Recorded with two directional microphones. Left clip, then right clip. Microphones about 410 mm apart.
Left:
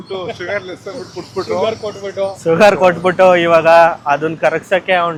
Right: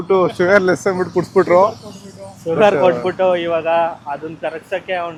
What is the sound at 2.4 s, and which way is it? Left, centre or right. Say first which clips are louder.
A man's voice: left 3 dB; centre.